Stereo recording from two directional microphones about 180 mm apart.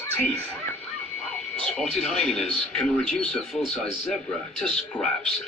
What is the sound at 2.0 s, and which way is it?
A man's voice, 5° left (ahead or behind).